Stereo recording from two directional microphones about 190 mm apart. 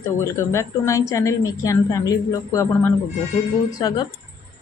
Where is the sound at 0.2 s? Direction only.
15° left (ahead or behind).